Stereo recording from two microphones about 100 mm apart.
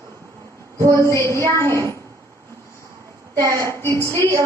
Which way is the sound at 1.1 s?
25° left (ahead or behind).